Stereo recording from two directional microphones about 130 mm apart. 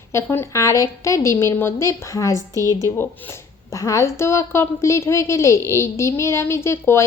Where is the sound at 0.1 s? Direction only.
20° left (ahead or behind).